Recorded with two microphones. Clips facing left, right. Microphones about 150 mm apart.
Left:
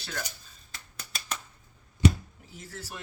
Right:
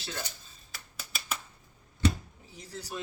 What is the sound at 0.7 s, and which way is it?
Finger snapping, 5° right (ahead or behind).